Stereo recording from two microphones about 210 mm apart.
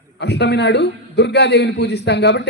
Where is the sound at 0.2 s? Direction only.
55° left (ahead or behind).